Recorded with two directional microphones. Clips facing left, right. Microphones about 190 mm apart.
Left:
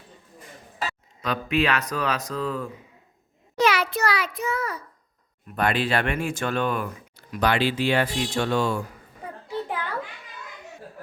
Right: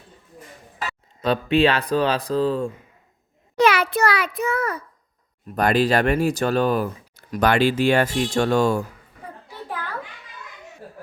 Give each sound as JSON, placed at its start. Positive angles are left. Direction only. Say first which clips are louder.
{"t": 1.2, "sound": "speech", "louder": "right 6 dB", "side_deg": -30}
{"t": 3.6, "sound": "a sound", "louder": "right 4 dB", "side_deg": -55}
{"t": 5.5, "sound": "speech", "louder": "right 5 dB", "side_deg": -40}